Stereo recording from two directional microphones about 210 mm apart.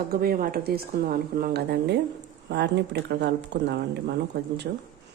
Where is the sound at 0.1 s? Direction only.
45° right (ahead or behind).